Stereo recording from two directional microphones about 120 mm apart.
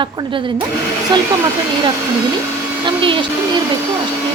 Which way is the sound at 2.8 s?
45° right (ahead or behind).